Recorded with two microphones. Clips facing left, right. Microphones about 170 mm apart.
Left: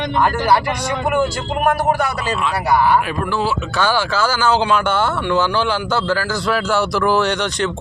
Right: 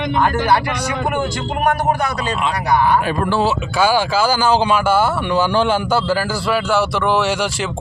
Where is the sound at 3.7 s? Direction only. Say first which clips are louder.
Right 3 dB; 10° right (ahead or behind).